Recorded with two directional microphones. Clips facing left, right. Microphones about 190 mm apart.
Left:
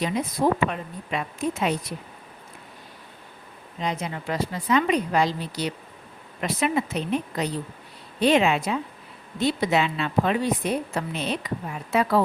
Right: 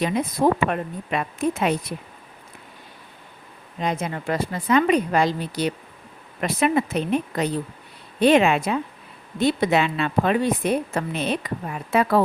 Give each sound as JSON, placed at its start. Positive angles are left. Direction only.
{"t": 0.7, "sound": "a woman's voice", "side_deg": -55}
{"t": 3.8, "sound": "a woman's voice", "side_deg": -50}